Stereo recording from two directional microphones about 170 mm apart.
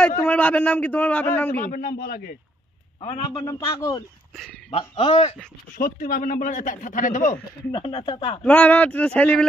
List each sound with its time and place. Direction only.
0.0 s a man's voice: 10° left (ahead or behind)
1.7 s a man's voice: 60° left (ahead or behind)
3.3 s a man's voice: 20° left (ahead or behind)
4.6 s speech: 35° left (ahead or behind)
5.8 s speech: 55° left (ahead or behind)
7.7 s speech: 30° left (ahead or behind)
8.5 s a man's voice: 10° left (ahead or behind)